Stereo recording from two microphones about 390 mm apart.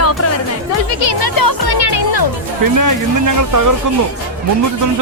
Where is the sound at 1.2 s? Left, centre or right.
Left.